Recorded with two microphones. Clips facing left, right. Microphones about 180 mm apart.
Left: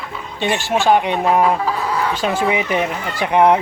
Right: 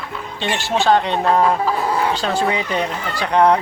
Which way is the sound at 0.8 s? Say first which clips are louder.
Even; 15° left (ahead or behind).